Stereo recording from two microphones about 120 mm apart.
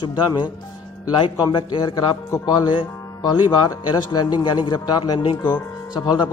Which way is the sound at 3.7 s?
35° left (ahead or behind).